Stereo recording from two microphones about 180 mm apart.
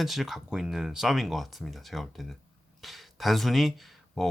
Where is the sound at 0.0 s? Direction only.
Centre (ahead or behind).